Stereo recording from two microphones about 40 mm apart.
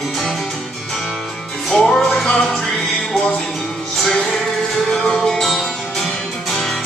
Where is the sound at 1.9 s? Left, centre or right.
Centre.